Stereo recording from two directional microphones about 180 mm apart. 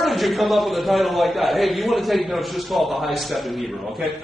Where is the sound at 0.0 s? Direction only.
Centre (ahead or behind).